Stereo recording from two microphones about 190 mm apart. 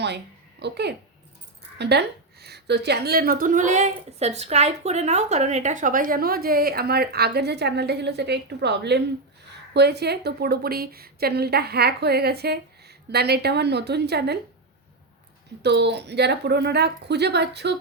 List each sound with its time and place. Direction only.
0.6 s a woman's voice: 60° right (ahead or behind)
15.6 s a woman's voice: 65° right (ahead or behind)